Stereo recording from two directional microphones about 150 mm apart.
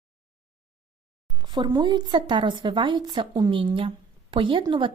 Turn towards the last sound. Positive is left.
turn(degrees=-35)  # may be behind; listen again after turning